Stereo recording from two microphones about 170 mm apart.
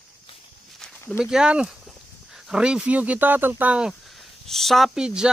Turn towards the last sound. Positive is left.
turn(degrees=-5)  # may be behind; listen again after turning